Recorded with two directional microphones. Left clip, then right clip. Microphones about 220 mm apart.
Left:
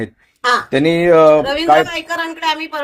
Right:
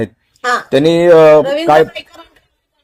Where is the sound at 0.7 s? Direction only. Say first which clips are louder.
Right 6 dB; 40° right (ahead or behind).